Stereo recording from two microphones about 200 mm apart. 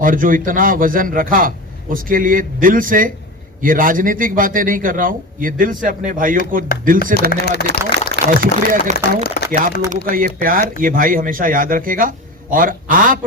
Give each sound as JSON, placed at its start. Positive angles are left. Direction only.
{"t": 0.0, "sound": "speech", "side_deg": -45}
{"t": 7.3, "sound": "speech", "side_deg": 50}
{"t": 8.1, "sound": "speech", "side_deg": -45}
{"t": 9.0, "sound": "speech", "side_deg": 55}
{"t": 10.1, "sound": "speech", "side_deg": -45}